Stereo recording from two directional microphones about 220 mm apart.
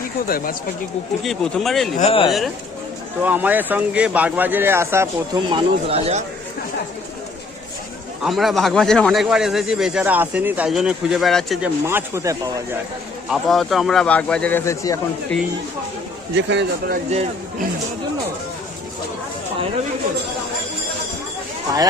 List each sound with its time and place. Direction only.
0.3 s speech: 40° left (ahead or behind)
1.2 s speech: centre (ahead or behind)
2.0 s speech: 25° left (ahead or behind)
3.2 s speech: 10° right (ahead or behind); by 6.2 s 30° right (ahead or behind)
8.2 s speech: centre (ahead or behind)
11.9 s speech: 10° right (ahead or behind)
13.2 s speech: centre (ahead or behind)
16.3 s a man's voice: 55° right (ahead or behind)